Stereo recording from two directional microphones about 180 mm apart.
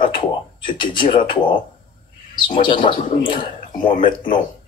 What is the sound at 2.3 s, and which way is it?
Speech, 25° left (ahead or behind).